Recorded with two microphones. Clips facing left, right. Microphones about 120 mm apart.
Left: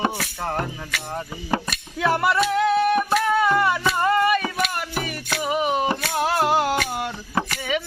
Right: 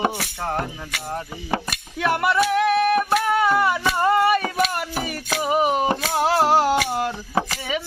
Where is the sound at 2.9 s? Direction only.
Centre (ahead or behind).